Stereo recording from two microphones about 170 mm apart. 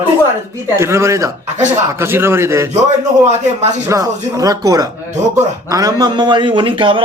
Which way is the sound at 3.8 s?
20° right (ahead or behind).